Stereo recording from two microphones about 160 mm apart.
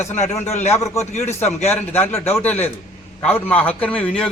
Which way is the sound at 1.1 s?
45° left (ahead or behind).